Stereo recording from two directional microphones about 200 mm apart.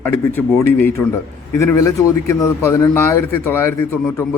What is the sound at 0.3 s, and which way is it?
Speech, 10° left (ahead or behind).